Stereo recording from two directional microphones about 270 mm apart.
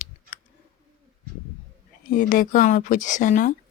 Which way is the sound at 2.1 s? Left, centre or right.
Left.